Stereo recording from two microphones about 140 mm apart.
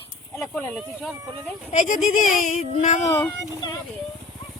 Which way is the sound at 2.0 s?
70° left (ahead or behind).